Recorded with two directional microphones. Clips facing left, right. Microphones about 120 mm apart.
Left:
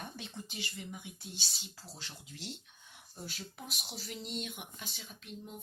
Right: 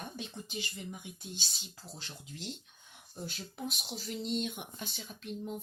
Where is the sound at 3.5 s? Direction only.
25° right (ahead or behind).